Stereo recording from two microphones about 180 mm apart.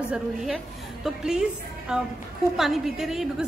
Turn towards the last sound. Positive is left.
turn(degrees=0)  # may be behind; listen again after turning